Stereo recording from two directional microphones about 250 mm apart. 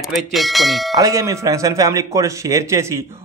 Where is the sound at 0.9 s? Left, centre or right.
Centre.